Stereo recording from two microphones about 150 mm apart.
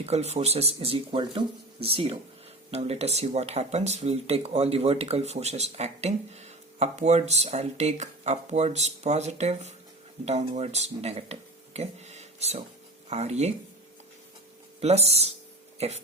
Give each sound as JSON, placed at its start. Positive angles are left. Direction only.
{"t": 0.0, "sound": "speech", "side_deg": -45}
{"t": 14.8, "sound": "speech", "side_deg": -45}